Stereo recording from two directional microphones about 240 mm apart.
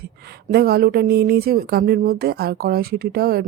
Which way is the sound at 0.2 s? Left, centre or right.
Right.